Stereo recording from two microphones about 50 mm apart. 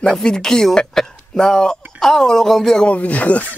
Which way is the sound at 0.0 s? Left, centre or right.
Centre.